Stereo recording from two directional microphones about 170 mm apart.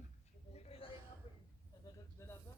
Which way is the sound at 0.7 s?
35° left (ahead or behind).